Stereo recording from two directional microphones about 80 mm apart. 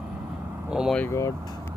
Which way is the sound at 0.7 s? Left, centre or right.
Centre.